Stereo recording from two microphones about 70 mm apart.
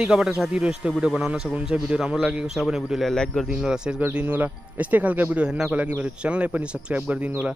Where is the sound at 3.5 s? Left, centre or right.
Centre.